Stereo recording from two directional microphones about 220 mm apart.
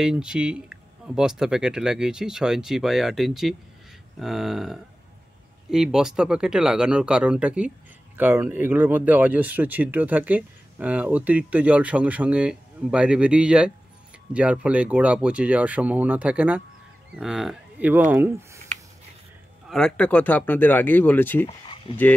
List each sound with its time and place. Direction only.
0.0 s speech: 5° right (ahead or behind)
19.7 s speech: 5° left (ahead or behind)
21.9 s speech: 25° left (ahead or behind)